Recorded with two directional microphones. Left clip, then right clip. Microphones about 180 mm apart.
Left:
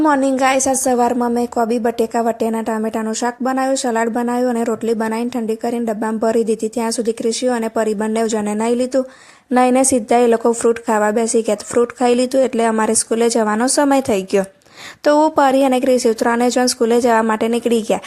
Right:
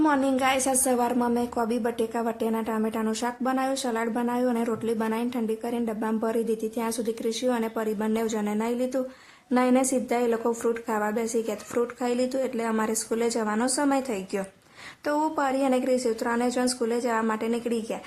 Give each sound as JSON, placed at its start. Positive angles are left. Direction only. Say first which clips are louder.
{"t": 0.0, "sound": "a woman's voice", "louder": "left 9 dB", "side_deg": 35}